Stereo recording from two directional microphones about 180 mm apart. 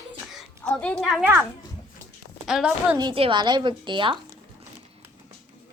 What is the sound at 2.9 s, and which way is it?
A woman's voice, 25° right (ahead or behind).